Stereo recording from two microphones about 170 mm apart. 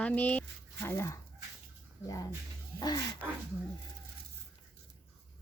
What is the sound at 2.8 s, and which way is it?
Speech, 25° left (ahead or behind).